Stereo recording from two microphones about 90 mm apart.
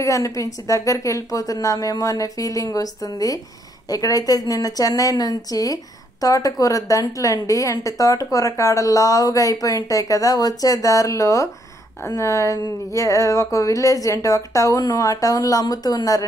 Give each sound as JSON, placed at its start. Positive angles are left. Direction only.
{"t": 0.0, "sound": "a woman's voice", "side_deg": 35}